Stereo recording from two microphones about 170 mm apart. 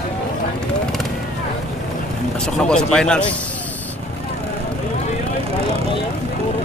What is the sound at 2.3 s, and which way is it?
Speech, 5° left (ahead or behind).